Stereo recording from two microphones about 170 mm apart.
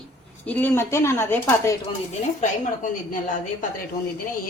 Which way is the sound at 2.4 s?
50° left (ahead or behind).